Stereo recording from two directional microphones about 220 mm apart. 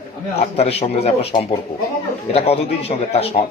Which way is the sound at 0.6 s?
30° left (ahead or behind).